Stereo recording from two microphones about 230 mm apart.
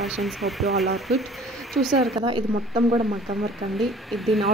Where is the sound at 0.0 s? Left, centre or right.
Centre.